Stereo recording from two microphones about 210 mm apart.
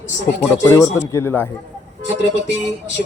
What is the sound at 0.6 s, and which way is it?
Speech, 15° left (ahead or behind).